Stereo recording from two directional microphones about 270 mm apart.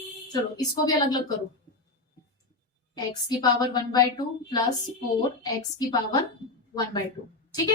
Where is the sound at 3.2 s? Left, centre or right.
Centre.